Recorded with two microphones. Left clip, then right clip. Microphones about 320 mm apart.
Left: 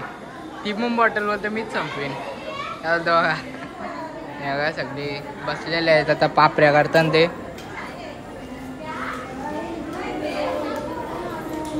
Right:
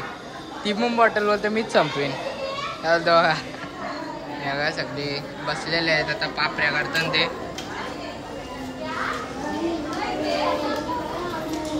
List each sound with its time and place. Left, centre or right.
0.7 s a man's voice: centre
4.5 s a man's voice: centre